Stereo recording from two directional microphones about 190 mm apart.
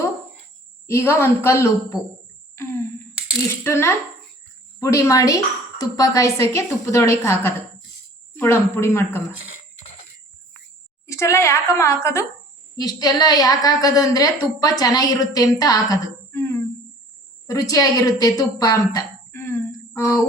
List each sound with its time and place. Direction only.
0.9 s a woman's voice: 15° left (ahead or behind)
11.0 s a woman's voice: 15° left (ahead or behind)